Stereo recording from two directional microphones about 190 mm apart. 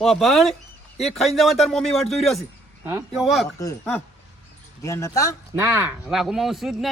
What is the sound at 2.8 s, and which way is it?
Speech, 10° right (ahead or behind).